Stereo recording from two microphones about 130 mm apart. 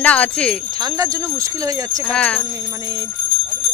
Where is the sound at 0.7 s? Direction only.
30° right (ahead or behind).